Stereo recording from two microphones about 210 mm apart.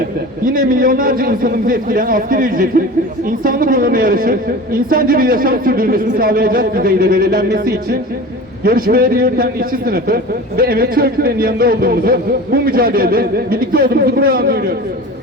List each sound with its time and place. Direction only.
0.4 s a man's voice: 40° right (ahead or behind)